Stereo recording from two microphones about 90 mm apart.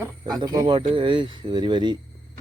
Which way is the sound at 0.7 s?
65° right (ahead or behind).